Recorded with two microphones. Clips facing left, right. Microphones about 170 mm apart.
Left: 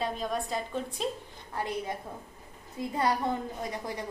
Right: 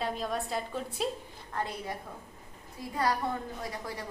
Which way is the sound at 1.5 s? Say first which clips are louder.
Left 2 dB; 20° left (ahead or behind).